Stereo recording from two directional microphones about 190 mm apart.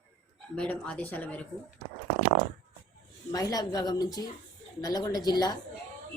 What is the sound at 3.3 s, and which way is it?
A woman's voice, 20° left (ahead or behind).